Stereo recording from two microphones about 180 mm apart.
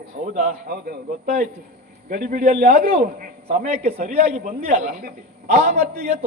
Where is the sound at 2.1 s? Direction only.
45° right (ahead or behind).